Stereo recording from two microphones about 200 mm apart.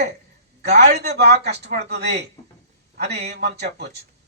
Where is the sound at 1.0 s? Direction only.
55° right (ahead or behind).